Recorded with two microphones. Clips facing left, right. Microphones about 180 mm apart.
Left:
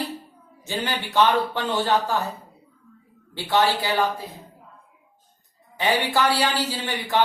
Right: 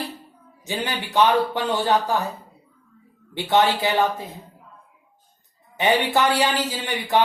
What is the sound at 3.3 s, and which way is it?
Speech, 20° right (ahead or behind).